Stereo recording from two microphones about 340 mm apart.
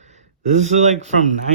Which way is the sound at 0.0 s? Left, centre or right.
Centre.